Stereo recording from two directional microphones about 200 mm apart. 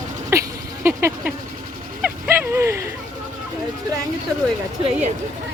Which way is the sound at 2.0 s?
10° right (ahead or behind).